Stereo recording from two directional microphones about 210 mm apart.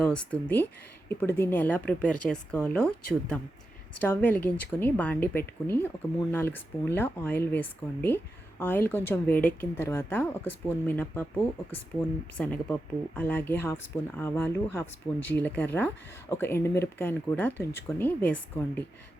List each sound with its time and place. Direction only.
0.0 s speech: 5° left (ahead or behind)
12.4 s speech: 5° left (ahead or behind)